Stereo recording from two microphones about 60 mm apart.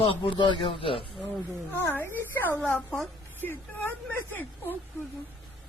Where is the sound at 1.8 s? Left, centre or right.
Left.